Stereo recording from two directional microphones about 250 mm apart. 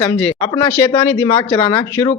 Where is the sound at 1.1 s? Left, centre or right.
Centre.